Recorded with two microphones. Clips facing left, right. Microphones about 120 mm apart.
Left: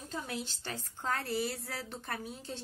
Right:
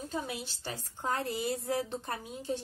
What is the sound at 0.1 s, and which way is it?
A woman's voice, 15° right (ahead or behind).